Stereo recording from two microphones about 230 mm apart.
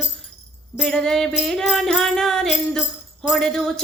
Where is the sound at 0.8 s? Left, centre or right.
Centre.